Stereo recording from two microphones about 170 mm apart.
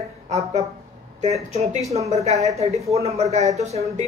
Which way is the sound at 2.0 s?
40° right (ahead or behind).